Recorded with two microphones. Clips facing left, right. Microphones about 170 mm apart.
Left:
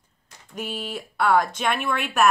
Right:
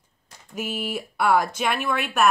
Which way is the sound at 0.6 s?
5° right (ahead or behind).